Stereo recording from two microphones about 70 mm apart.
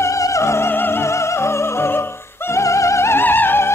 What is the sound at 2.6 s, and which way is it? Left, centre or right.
Music, left.